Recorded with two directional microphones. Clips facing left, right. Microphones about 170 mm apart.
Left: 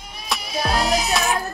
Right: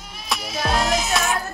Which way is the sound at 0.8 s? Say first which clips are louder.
Left 1 dB; 35° left (ahead or behind).